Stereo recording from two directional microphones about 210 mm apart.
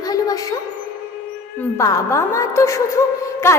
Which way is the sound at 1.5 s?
15° left (ahead or behind).